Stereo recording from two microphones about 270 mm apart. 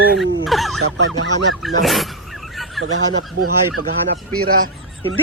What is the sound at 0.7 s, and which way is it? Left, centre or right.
Speech, right.